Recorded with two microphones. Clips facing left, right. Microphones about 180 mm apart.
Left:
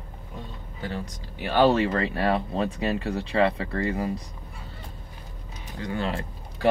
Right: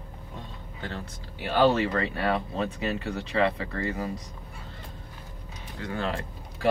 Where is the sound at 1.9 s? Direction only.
35° left (ahead or behind).